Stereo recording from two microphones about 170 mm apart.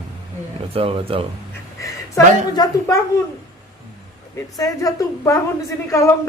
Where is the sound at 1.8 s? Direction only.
20° left (ahead or behind).